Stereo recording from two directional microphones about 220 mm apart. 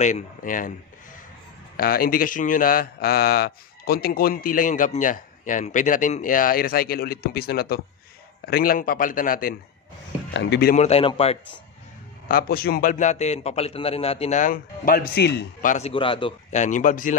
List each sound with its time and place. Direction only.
0.0 s speech: 35° left (ahead or behind)
1.8 s speech: 40° left (ahead or behind)
10.3 s speech: 50° left (ahead or behind)
10.8 s a man's voice: 25° left (ahead or behind)
12.3 s speech: 40° left (ahead or behind)
15.9 s speech: 25° left (ahead or behind)